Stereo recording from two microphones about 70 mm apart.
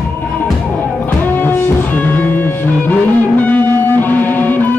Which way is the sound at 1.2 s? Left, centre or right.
Left.